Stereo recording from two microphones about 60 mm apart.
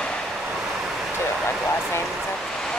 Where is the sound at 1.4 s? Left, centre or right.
Left.